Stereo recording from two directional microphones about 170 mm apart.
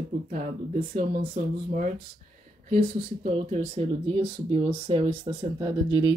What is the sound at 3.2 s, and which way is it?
Speech, 40° right (ahead or behind).